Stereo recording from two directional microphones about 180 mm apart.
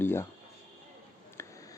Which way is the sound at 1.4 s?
15° left (ahead or behind).